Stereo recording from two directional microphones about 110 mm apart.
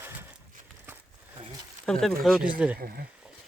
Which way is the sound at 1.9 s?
Centre (ahead or behind).